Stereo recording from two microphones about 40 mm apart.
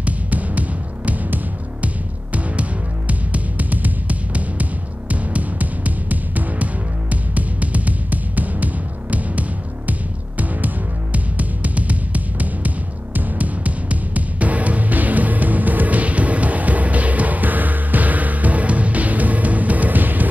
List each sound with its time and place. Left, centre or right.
0.0 s music: right
3.1 s music: right